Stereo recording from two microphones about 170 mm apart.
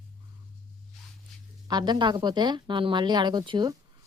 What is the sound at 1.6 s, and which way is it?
Speech, 25° right (ahead or behind).